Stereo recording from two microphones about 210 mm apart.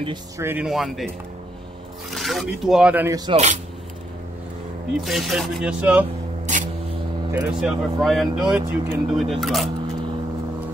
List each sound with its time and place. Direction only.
0.0 s speech: 15° right (ahead or behind)
3.3 s speech: 30° right (ahead or behind)
4.9 s speech: centre (ahead or behind)
6.4 s a sound: 35° right (ahead or behind)
7.3 s speech: centre (ahead or behind)